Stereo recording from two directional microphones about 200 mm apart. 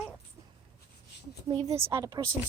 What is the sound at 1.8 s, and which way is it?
Speech, 15° right (ahead or behind).